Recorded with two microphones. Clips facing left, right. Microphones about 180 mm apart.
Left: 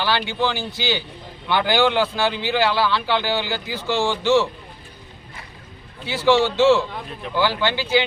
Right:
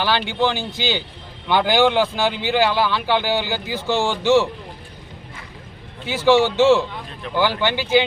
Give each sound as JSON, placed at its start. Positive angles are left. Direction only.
{"t": 0.0, "sound": "a man's voice", "side_deg": -15}
{"t": 6.1, "sound": "a man's voice", "side_deg": -15}